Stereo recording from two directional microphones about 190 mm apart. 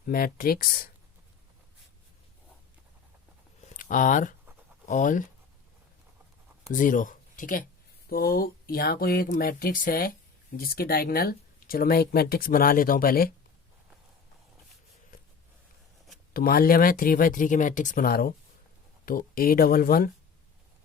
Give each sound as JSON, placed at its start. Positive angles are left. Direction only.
{"t": 0.0, "sound": "speech", "side_deg": 50}
{"t": 3.8, "sound": "speech", "side_deg": 45}
{"t": 6.7, "sound": "speech", "side_deg": 45}
{"t": 16.3, "sound": "speech", "side_deg": 50}